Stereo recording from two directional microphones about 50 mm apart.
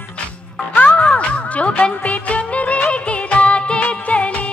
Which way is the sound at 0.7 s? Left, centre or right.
Left.